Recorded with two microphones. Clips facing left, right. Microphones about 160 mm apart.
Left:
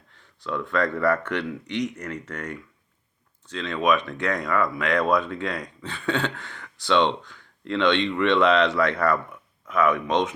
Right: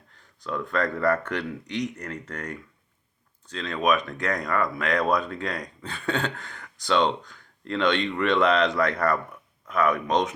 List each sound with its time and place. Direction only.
0.1 s speech: 40° right (ahead or behind)